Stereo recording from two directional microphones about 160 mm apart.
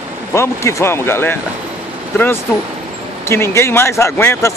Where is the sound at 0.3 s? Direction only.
15° left (ahead or behind).